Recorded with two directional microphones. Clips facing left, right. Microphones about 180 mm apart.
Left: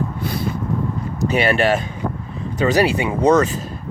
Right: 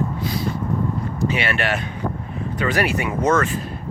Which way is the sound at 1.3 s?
35° left (ahead or behind).